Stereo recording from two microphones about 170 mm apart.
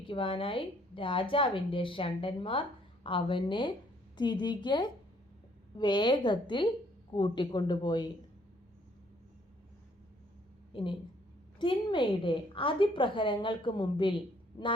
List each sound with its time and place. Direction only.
0.0 s a woman's voice: 30° left (ahead or behind)
10.7 s a woman's voice: 30° left (ahead or behind)